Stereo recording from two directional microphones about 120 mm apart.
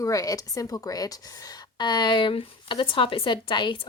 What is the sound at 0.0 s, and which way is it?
A woman's voice, 30° left (ahead or behind).